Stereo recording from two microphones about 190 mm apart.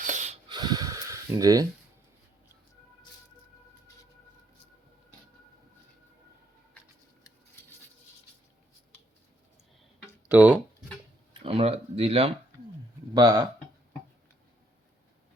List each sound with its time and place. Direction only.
0.0 s snort: 40° right (ahead or behind)
0.4 s a sound: 20° right (ahead or behind)
10.2 s speech: 10° right (ahead or behind)
11.4 s speech: 30° right (ahead or behind)